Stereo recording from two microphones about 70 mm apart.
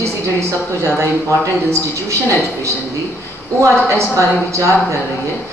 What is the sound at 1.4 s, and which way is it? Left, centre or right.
Speech, right.